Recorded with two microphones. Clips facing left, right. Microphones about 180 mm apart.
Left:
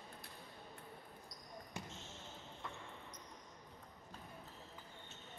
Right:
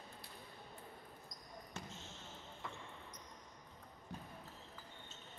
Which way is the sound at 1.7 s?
10° left (ahead or behind).